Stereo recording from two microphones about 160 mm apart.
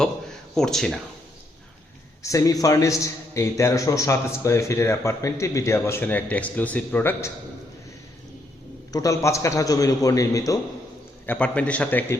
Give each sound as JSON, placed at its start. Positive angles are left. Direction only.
{"t": 0.5, "sound": "speech", "side_deg": 5}
{"t": 2.2, "sound": "a man's voice", "side_deg": 20}
{"t": 8.9, "sound": "a man's voice", "side_deg": 20}
{"t": 11.3, "sound": "a man's voice", "side_deg": 10}